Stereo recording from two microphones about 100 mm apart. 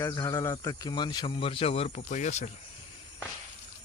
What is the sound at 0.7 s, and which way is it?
Speech, 45° left (ahead or behind).